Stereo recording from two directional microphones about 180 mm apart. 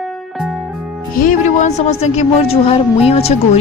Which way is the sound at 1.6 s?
35° left (ahead or behind).